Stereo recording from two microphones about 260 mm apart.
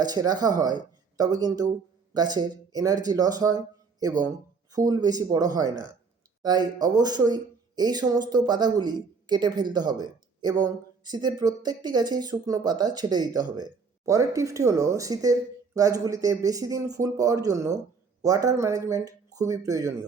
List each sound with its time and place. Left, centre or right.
0.0 s speech: centre